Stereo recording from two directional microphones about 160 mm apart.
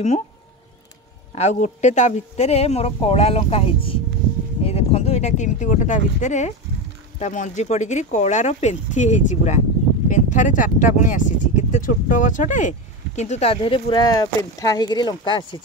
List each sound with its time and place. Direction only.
1.3 s speech: 45° left (ahead or behind); by 15.4 s 30° left (ahead or behind)